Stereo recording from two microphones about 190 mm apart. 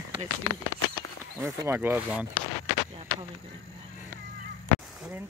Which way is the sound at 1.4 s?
15° right (ahead or behind).